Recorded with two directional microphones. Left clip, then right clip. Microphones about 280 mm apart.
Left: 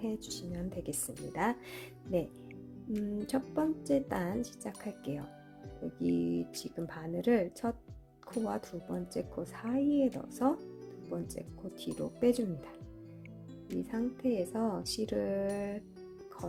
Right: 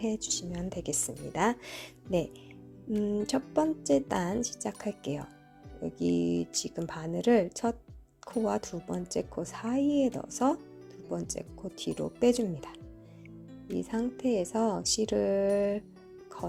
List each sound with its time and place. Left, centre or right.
0.0 s speech: centre
13.7 s speech: centre